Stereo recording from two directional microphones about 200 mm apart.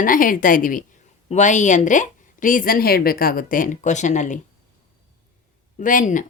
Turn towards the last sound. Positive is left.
turn(degrees=40)  # may be behind; listen again after turning